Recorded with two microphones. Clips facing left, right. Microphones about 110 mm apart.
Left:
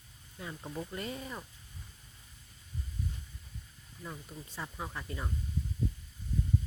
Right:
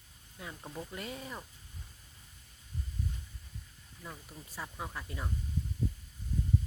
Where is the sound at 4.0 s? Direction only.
Centre (ahead or behind).